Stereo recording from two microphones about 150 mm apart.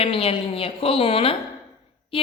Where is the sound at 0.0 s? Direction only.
40° left (ahead or behind).